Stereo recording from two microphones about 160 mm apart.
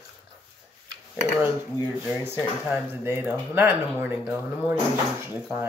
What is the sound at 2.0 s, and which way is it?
Speech, 15° right (ahead or behind).